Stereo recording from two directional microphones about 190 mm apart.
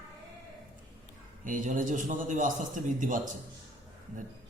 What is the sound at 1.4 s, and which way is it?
A man's voice, 45° right (ahead or behind).